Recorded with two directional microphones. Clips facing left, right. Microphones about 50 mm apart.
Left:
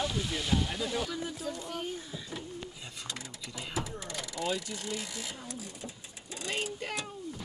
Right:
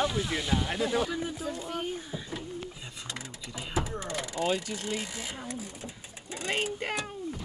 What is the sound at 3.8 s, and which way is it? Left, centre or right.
Vehicle, right.